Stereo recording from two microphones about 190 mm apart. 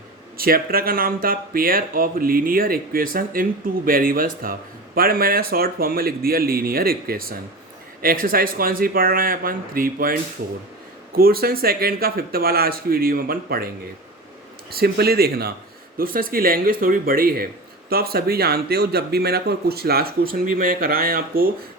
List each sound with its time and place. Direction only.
0.3 s speech: 50° right (ahead or behind)
14.7 s speech: 55° right (ahead or behind)